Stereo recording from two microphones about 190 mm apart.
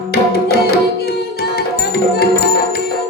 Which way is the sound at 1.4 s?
55° left (ahead or behind).